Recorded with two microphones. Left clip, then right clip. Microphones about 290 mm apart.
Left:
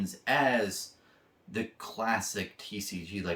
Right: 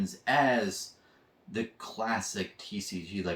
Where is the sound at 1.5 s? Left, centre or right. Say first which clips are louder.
Even; centre.